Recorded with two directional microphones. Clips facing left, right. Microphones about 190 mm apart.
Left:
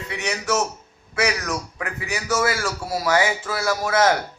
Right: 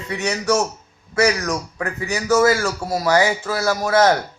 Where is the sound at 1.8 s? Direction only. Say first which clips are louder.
Right 5 dB; 40° right (ahead or behind).